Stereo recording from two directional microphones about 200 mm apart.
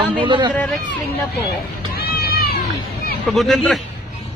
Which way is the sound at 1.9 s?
50° left (ahead or behind).